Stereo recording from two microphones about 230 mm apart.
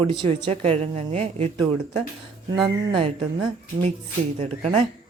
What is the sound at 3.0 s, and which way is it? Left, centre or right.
A woman's voice, right.